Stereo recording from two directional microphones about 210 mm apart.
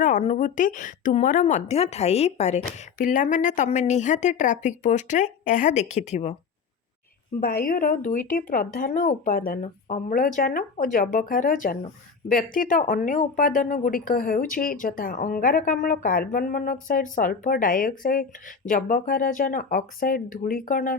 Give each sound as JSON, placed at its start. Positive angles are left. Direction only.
{"t": 0.0, "sound": "speech", "side_deg": 35}
{"t": 7.4, "sound": "speech", "side_deg": 45}